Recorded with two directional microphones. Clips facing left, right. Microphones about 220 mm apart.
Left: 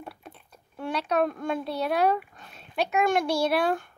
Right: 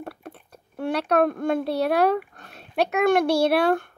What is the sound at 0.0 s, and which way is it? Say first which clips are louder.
A child's voice: right 6 dB; 60° right (ahead or behind).